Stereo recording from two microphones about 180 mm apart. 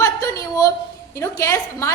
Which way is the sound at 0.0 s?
20° left (ahead or behind).